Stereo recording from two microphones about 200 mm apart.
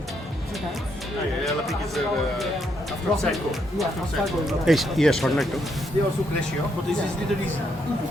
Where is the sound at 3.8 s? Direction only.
Centre (ahead or behind).